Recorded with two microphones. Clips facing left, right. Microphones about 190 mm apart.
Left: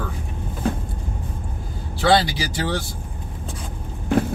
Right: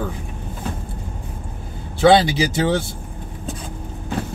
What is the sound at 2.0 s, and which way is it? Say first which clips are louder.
Speech: right 5 dB; 20° right (ahead or behind).